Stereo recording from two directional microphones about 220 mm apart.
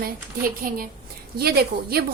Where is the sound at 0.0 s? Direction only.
40° right (ahead or behind).